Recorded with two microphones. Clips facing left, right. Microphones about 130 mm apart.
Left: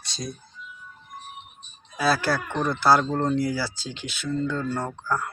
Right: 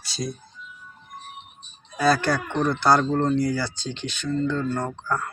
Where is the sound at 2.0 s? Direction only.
5° left (ahead or behind).